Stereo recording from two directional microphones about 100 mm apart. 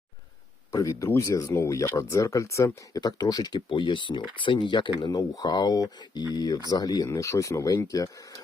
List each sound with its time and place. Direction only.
0.7 s speech: 35° left (ahead or behind)
3.0 s speech: 40° left (ahead or behind)
3.7 s speech: 55° left (ahead or behind); by 8.4 s 35° left (ahead or behind)